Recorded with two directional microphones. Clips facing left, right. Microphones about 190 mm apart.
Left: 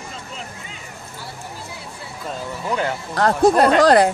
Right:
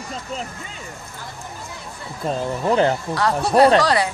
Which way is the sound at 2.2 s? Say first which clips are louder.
Right 6 dB; 30° right (ahead or behind).